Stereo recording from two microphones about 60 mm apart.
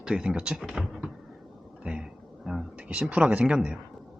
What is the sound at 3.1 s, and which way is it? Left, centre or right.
Speech, right.